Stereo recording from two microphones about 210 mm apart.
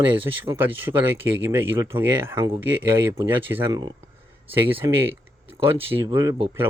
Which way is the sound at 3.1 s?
10° right (ahead or behind).